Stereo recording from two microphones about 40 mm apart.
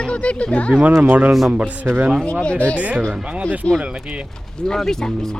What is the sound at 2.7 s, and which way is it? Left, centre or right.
A man's voice, right.